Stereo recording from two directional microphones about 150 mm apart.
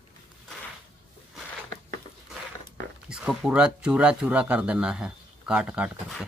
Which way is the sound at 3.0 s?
5° right (ahead or behind).